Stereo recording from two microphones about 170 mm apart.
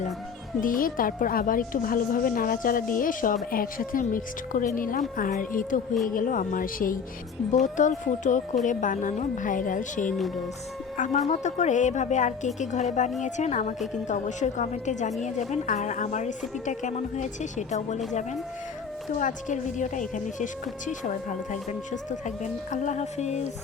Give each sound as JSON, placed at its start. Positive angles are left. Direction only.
{"t": 0.6, "sound": "a woman's voice", "side_deg": 55}
{"t": 10.1, "sound": "speech", "side_deg": 0}
{"t": 10.9, "sound": "speech", "side_deg": 50}
{"t": 19.2, "sound": "speech", "side_deg": 45}